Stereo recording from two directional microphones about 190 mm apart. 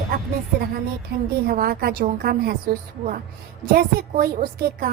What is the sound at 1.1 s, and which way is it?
A woman's voice, 60° right (ahead or behind).